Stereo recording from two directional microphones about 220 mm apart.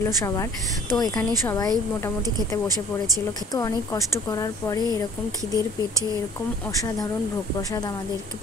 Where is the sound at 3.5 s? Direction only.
15° left (ahead or behind).